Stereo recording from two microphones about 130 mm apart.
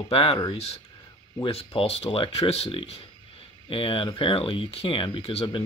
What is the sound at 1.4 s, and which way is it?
Speech, 50° left (ahead or behind).